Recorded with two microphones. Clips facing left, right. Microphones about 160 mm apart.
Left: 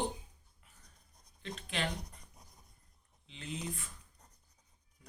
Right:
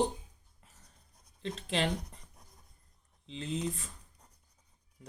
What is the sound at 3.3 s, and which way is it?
Speech, 30° right (ahead or behind).